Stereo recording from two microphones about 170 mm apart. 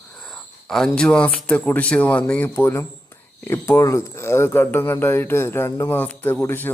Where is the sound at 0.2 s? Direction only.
5° left (ahead or behind).